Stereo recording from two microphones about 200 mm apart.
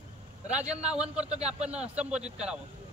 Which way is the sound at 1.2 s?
30° right (ahead or behind).